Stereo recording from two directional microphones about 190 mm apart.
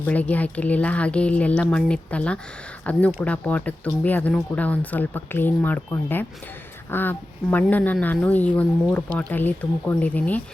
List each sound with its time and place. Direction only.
0.0 s speech: 10° left (ahead or behind)